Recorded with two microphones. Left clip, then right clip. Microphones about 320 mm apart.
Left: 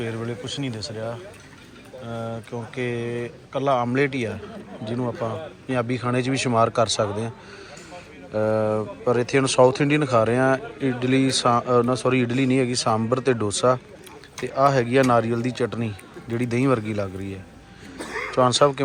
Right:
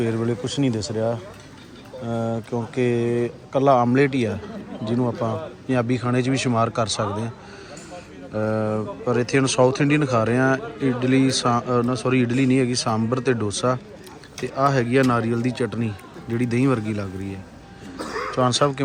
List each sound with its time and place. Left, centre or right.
0.0 s speech: centre
17.9 s a sound: right
18.3 s speech: centre